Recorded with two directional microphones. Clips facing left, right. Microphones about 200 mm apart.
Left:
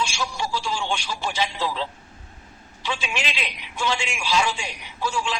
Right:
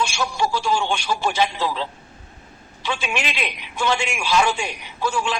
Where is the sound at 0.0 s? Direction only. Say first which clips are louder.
Right 5 dB; 55° right (ahead or behind).